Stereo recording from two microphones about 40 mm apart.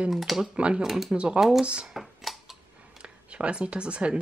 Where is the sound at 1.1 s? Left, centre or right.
Right.